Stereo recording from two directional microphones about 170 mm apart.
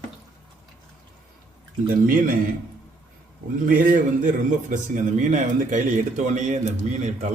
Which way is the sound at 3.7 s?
55° right (ahead or behind).